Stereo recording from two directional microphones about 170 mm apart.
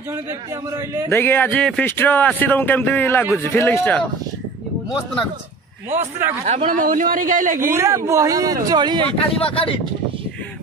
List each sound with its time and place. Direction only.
0.7 s speech: 20° right (ahead or behind)
1.1 s speech: 10° left (ahead or behind)
5.9 s speech: 15° right (ahead or behind)
6.4 s speech: 40° right (ahead or behind)
7.7 s speech: 15° right (ahead or behind)
9.4 s speech: 30° left (ahead or behind)